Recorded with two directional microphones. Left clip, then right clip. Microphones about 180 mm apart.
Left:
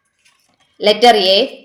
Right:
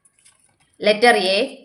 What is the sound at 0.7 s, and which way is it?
Speech, 10° right (ahead or behind).